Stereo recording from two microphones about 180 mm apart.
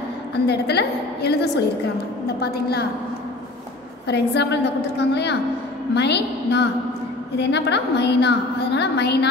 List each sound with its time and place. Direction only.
0.5 s a woman's voice: 65° left (ahead or behind)
4.1 s a woman's voice: 70° left (ahead or behind)